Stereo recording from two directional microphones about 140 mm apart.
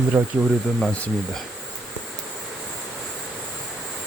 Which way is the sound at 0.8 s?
5° left (ahead or behind).